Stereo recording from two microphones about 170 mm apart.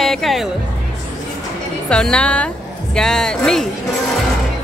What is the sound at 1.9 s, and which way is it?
A woman's voice, 5° left (ahead or behind).